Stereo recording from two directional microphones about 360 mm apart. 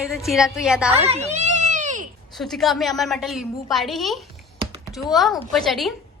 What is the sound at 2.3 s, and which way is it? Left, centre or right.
A woman's voice, centre.